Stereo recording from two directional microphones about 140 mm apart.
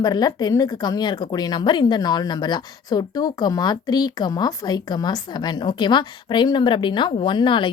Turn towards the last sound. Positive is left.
turn(degrees=35)  # may be behind; listen again after turning